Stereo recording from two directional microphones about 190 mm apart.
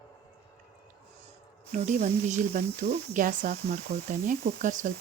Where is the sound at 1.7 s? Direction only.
40° right (ahead or behind).